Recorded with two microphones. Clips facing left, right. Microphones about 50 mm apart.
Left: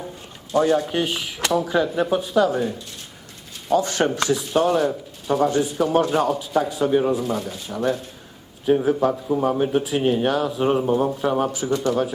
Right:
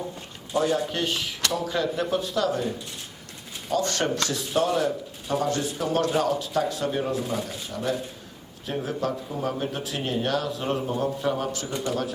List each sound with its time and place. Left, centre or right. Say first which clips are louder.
0.5 s speech: left 5 dB; centre
3.7 s speech: left 5 dB; centre
7.7 s speech: left 6 dB; centre